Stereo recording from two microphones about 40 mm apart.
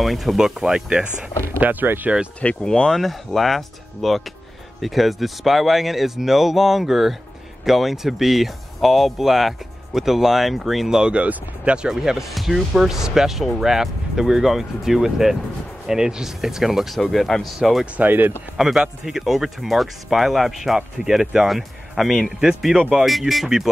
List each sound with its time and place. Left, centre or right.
0.0 s speech: centre
0.4 s speech: centre
1.6 s speech: right
2.1 s speech: centre
2.6 s speech: centre
3.3 s speech: centre
10.9 s speech: centre
11.1 s speech: right
11.9 s speech: centre
18.0 s speech: right
18.6 s speech: centre